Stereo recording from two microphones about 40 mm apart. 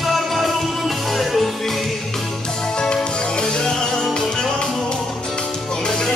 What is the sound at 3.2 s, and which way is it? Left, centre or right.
Music, left.